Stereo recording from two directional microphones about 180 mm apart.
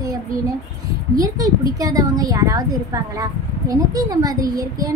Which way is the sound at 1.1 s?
20° right (ahead or behind).